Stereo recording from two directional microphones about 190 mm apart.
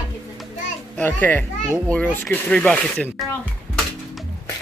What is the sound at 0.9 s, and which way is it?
Speech, 5° left (ahead or behind).